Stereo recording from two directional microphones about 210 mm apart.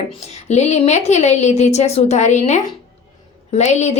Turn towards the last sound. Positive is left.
turn(degrees=35)  # may be behind; listen again after turning